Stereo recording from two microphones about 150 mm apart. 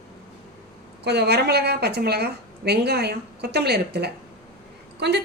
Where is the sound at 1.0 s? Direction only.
90° right.